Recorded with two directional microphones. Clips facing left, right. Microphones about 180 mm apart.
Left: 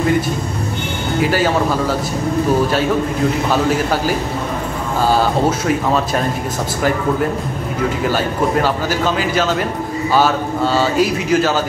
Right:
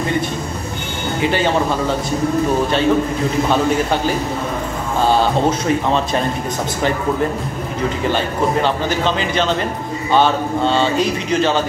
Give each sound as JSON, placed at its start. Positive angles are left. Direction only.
{"t": 1.3, "sound": "speech", "side_deg": 5}
{"t": 3.4, "sound": "speech", "side_deg": 5}
{"t": 8.6, "sound": "speech", "side_deg": 5}